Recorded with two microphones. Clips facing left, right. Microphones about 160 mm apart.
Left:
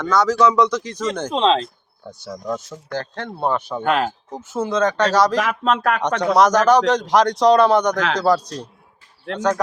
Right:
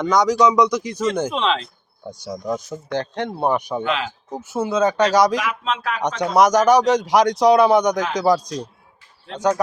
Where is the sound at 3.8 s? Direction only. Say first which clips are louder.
Left 9 dB; 50° left (ahead or behind).